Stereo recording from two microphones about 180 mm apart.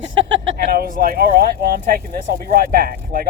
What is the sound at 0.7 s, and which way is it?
Speech, 55° right (ahead or behind).